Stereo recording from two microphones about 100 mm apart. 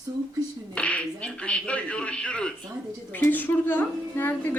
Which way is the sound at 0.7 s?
10° left (ahead or behind).